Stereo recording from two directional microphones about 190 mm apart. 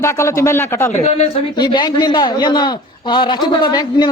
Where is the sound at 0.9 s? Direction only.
35° left (ahead or behind).